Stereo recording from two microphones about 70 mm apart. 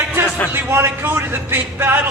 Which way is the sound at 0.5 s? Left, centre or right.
Right.